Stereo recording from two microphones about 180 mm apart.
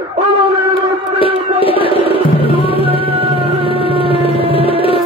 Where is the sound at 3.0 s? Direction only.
30° right (ahead or behind).